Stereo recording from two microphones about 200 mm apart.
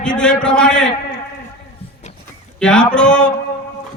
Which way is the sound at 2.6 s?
5° left (ahead or behind).